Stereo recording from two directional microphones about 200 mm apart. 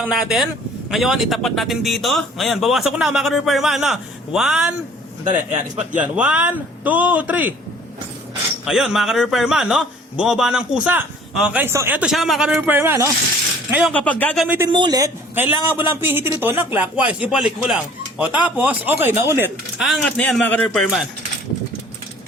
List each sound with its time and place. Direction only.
0.0 s a man's voice: 5° right (ahead or behind)
5.3 s a man's voice: 35° right (ahead or behind)
5.9 s a man's voice: 5° right (ahead or behind)
8.6 s a man's voice: 5° right (ahead or behind)
13.9 s speech: 5° left (ahead or behind)
14.4 s a man's voice: 10° right (ahead or behind)
14.7 s a man's voice: 20° right (ahead or behind)
19.8 s a man's voice: centre (ahead or behind)